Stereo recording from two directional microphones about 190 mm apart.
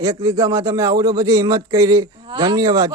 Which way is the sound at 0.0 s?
15° right (ahead or behind).